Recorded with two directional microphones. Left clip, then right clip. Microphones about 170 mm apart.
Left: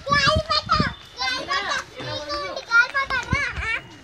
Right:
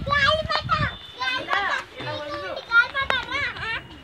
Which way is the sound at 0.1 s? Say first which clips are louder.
Left 1 dB; centre (ahead or behind).